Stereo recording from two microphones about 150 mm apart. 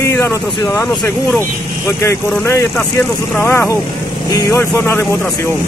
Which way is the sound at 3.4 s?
15° left (ahead or behind).